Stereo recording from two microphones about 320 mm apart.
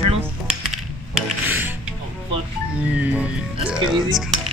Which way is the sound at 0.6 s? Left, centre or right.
Centre.